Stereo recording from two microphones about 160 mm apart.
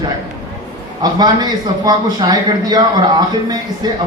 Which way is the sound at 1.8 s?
25° right (ahead or behind).